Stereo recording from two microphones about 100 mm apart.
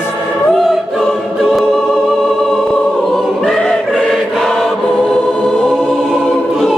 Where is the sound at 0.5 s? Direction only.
Centre (ahead or behind).